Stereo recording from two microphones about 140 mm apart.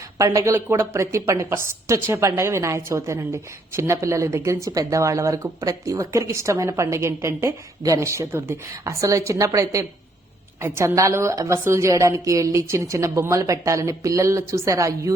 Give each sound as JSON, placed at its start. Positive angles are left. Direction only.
{"t": 0.2, "sound": "a woman's voice", "side_deg": -25}